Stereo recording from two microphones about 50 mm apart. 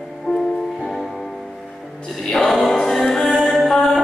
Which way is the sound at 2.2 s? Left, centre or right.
Centre.